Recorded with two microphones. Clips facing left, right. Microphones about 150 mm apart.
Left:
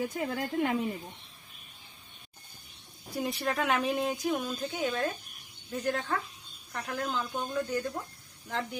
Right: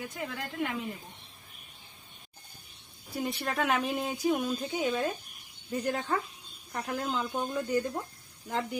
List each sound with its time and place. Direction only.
0.3 s a woman's voice: 40° left (ahead or behind)
3.1 s speech: centre (ahead or behind)